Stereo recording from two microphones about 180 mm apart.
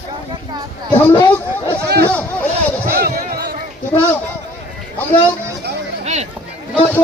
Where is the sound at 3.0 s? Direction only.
60° right (ahead or behind).